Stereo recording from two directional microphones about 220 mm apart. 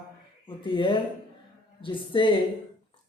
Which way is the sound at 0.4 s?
25° left (ahead or behind).